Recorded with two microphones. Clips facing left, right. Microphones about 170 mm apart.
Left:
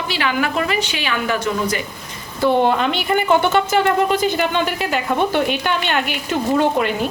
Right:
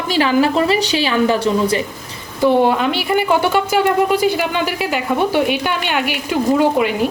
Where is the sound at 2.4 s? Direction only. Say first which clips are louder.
Right 2 dB; 10° right (ahead or behind).